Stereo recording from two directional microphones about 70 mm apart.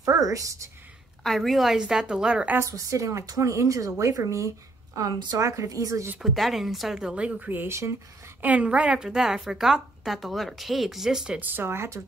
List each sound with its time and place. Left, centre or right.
0.0 s a woman's voice: right
1.2 s a woman's voice: centre
2.6 s a woman's voice: right
6.2 s a woman's voice: centre; by 7.6 s right
7.6 s speech: right
8.4 s a woman's voice: right
11.3 s speech: right